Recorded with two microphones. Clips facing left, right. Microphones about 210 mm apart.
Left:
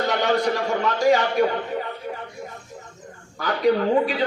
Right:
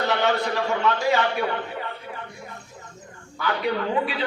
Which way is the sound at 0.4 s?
40° left (ahead or behind).